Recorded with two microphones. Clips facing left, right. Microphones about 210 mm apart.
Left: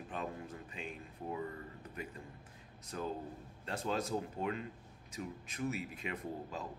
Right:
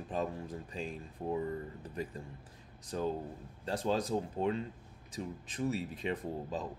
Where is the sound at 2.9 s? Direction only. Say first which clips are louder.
Right 5 dB; 30° right (ahead or behind).